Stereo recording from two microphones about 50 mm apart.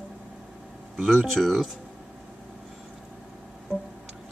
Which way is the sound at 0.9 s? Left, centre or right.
Centre.